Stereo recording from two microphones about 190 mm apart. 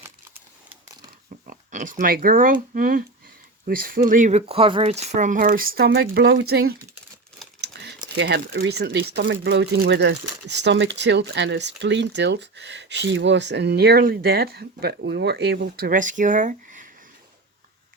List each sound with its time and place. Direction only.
0.0 s crumpling: 10° right (ahead or behind)
1.5 s speech: 45° right (ahead or behind)
7.6 s a sound: 65° right (ahead or behind)
8.1 s speech: 65° right (ahead or behind); by 16.9 s 45° right (ahead or behind)